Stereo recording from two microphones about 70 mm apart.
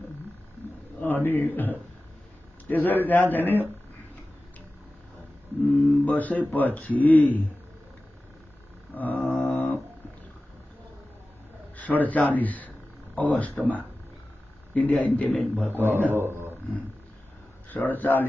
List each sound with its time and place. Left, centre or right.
1.2 s a man's voice: left
2.7 s a man's voice: left
5.7 s a man's voice: left
8.9 s a man's voice: left
9.4 s music: left
11.7 s a man's voice: left
14.7 s a man's voice: centre
15.3 s a man's voice: centre
15.7 s a man's voice: right
17.6 s a man's voice: left